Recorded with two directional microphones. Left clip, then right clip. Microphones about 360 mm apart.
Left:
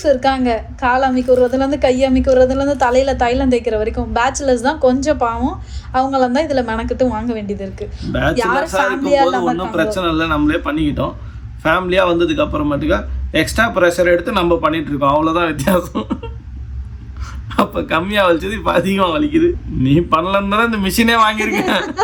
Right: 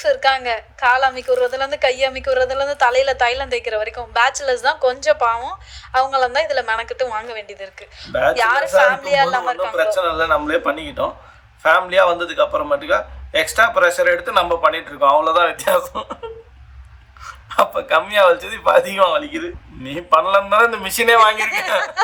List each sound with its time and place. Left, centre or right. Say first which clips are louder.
0.0 s a woman's voice: left 2 dB; right
8.1 s speech: right 2 dB; centre
8.4 s a woman's voice: right 2 dB; right
9.7 s a man's voice: right 2 dB; centre
17.5 s a man's voice: right 1 dB; centre